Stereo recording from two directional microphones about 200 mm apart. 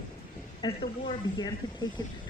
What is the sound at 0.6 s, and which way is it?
Speech, 25° left (ahead or behind).